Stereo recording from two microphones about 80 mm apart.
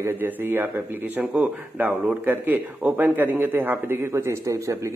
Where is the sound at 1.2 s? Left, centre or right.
Centre.